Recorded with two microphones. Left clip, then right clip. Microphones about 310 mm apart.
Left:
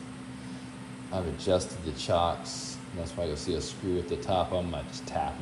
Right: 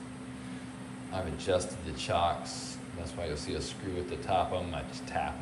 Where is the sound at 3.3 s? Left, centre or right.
Centre.